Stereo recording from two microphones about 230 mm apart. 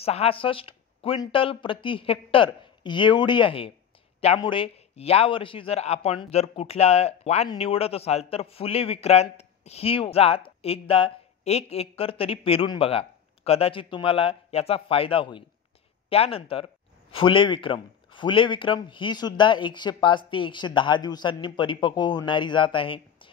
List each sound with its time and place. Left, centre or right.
0.0 s a man's voice: left